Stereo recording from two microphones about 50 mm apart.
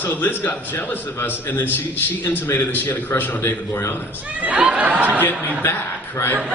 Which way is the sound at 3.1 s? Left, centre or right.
Left.